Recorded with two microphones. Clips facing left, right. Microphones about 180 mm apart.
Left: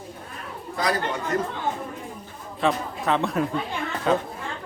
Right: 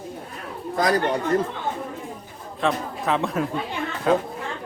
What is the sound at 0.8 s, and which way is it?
Speech, 40° right (ahead or behind).